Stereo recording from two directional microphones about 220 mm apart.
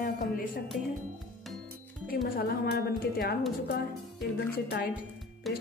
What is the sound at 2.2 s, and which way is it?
Speech, 45° left (ahead or behind).